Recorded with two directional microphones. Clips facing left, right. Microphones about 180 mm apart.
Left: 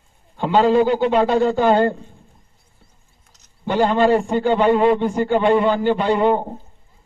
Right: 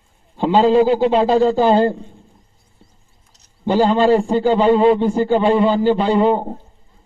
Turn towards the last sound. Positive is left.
turn(degrees=-30)  # may be behind; listen again after turning